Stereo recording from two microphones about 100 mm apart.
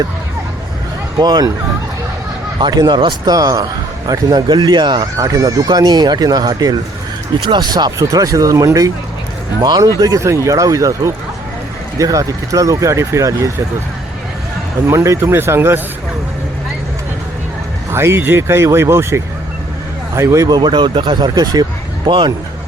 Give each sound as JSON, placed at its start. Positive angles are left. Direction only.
{"t": 1.2, "sound": "speech", "side_deg": -40}
{"t": 2.6, "sound": "a man's voice", "side_deg": -45}
{"t": 5.1, "sound": "a man's voice", "side_deg": -35}
{"t": 10.0, "sound": "speech", "side_deg": -30}
{"t": 14.8, "sound": "speech", "side_deg": -30}
{"t": 17.9, "sound": "speech", "side_deg": -25}
{"t": 20.5, "sound": "a man's voice", "side_deg": -50}